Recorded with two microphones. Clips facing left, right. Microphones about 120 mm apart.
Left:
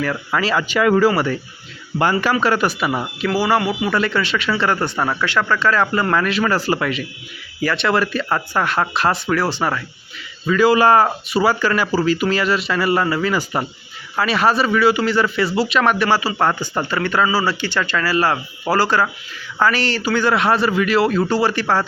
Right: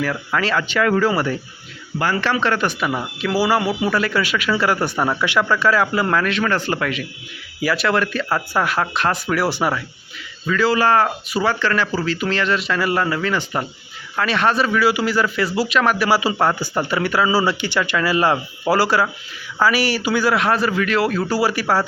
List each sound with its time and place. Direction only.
0.3 s speech: 10° left (ahead or behind)
1.1 s speech: centre (ahead or behind)
3.2 s speech: 5° right (ahead or behind)
7.6 s speech: 5° right (ahead or behind)
10.4 s speech: 15° left (ahead or behind)
11.3 s speech: 5° left (ahead or behind)